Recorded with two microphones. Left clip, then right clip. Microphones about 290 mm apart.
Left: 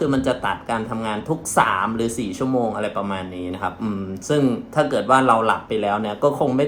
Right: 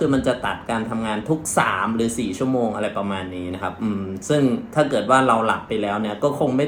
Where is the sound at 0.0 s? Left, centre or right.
Centre.